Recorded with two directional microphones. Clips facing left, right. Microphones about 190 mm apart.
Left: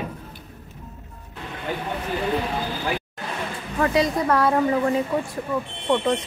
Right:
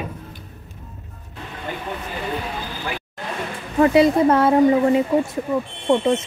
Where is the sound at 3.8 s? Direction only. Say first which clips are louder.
Right 7 dB; 25° right (ahead or behind).